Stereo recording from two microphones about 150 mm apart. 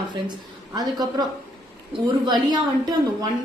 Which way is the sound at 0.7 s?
25° right (ahead or behind).